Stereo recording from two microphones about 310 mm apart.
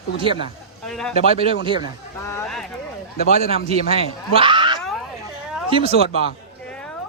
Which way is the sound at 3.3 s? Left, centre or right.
Right.